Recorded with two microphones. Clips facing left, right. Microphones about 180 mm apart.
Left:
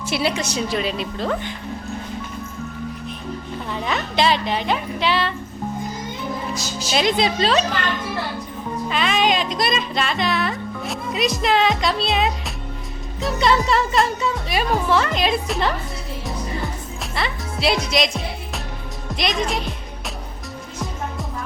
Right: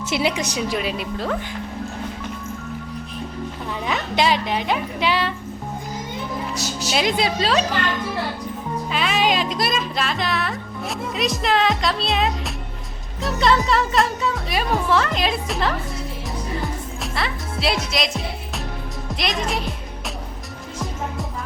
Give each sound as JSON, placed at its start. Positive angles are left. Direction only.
{"t": 0.0, "sound": "a woman's voice", "side_deg": -20}
{"t": 3.7, "sound": "a woman's voice", "side_deg": -5}
{"t": 6.5, "sound": "a woman's voice", "side_deg": -70}
{"t": 6.9, "sound": "a woman's voice", "side_deg": -5}
{"t": 8.9, "sound": "music", "side_deg": -5}
{"t": 13.2, "sound": "speech", "side_deg": 0}
{"t": 17.0, "sound": "speech", "side_deg": 0}
{"t": 19.1, "sound": "speech", "side_deg": 0}